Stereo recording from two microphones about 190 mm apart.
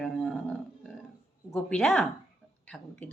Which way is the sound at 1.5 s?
5° left (ahead or behind).